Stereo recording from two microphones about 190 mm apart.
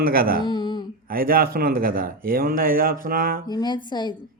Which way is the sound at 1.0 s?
50° right (ahead or behind).